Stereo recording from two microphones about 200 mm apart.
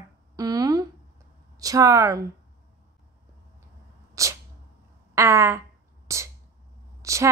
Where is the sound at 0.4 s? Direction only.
20° right (ahead or behind).